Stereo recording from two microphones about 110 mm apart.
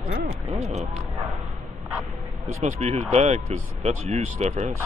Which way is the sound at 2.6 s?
90° right.